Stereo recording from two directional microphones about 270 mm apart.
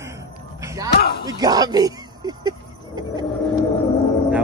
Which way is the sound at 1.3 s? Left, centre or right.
Centre.